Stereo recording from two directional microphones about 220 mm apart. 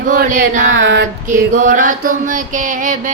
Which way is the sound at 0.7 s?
55° right (ahead or behind).